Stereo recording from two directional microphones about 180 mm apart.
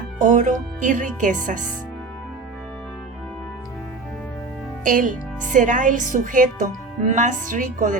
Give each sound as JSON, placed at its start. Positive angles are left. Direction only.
{"t": 0.2, "sound": "a woman's voice", "side_deg": -45}
{"t": 4.8, "sound": "a woman's voice", "side_deg": -45}